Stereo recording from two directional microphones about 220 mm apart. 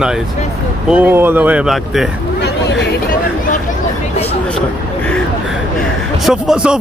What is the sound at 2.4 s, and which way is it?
Hubbub, 50° left (ahead or behind).